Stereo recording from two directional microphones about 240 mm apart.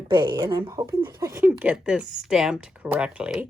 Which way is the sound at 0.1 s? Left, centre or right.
Centre.